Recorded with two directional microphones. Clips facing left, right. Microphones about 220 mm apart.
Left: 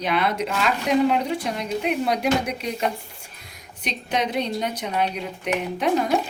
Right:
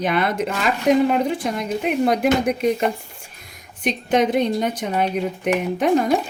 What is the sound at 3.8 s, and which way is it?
Speech, 50° right (ahead or behind).